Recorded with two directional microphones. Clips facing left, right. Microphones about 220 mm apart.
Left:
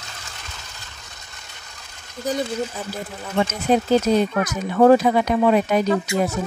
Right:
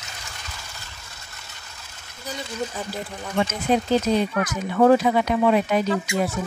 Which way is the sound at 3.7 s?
40° left (ahead or behind).